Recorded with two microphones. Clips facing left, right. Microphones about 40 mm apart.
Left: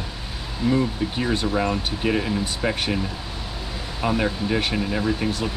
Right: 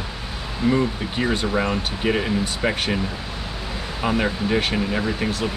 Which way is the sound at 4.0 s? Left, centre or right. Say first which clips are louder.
Right 1 dB; right.